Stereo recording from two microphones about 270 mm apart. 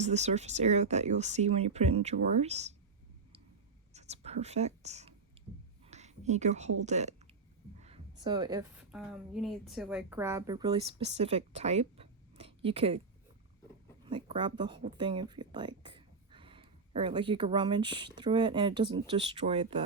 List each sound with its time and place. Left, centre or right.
0.0 s speech: right
3.9 s writing: right
5.8 s a woman's voice: right
14.3 s speech: centre